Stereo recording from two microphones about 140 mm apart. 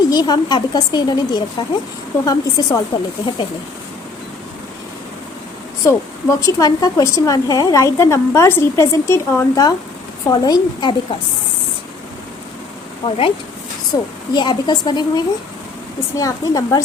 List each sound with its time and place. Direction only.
0.1 s a woman's voice: 30° left (ahead or behind)
5.8 s a woman's voice: 20° left (ahead or behind)
13.1 s a woman's voice: 40° left (ahead or behind)
13.9 s a woman's voice: 25° left (ahead or behind)